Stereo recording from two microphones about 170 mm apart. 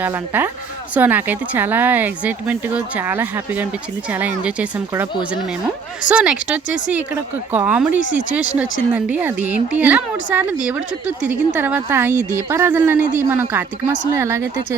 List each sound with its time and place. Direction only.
0.0 s speech: 10° right (ahead or behind)